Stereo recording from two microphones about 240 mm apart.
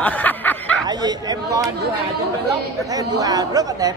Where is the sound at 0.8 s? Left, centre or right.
Centre.